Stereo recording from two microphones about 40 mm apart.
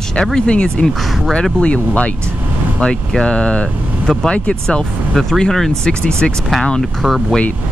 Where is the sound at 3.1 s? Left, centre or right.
Centre.